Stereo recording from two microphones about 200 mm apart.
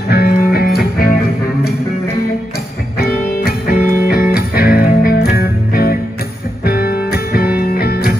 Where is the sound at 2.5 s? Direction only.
50° left (ahead or behind).